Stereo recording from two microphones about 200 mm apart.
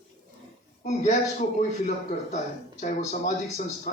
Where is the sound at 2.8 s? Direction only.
35° left (ahead or behind).